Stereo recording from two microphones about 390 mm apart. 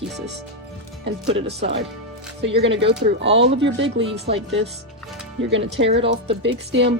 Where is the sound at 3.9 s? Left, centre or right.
Centre.